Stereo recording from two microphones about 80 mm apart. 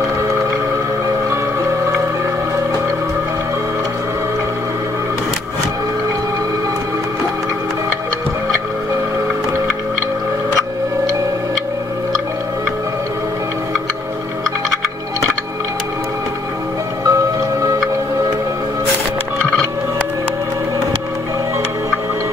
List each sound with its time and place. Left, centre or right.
1.3 s whale vocalization: right
17.0 s music: right